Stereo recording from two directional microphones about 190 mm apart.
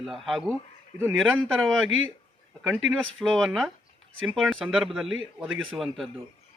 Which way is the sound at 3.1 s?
Centre (ahead or behind).